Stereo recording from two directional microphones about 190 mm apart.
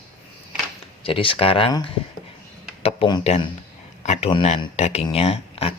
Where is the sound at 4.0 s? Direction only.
30° left (ahead or behind).